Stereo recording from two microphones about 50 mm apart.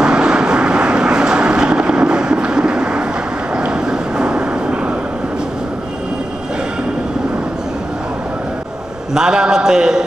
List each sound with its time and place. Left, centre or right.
0.0 s vehicle: centre
3.5 s a sound: centre
9.1 s a man's voice: centre